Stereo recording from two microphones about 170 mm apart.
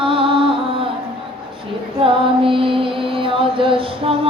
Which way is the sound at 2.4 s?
30° right (ahead or behind).